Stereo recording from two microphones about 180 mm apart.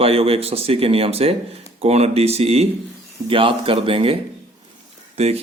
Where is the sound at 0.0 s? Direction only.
30° right (ahead or behind).